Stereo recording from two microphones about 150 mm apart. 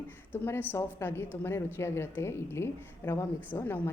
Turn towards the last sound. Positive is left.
turn(degrees=15)  # may be behind; listen again after turning